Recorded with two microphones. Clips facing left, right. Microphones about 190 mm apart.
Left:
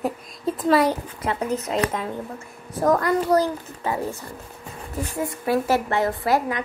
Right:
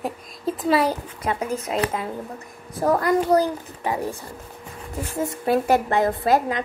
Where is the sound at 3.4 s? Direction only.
15° right (ahead or behind).